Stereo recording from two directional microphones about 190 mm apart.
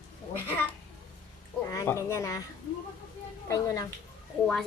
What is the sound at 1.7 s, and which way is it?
Speech, 15° left (ahead or behind).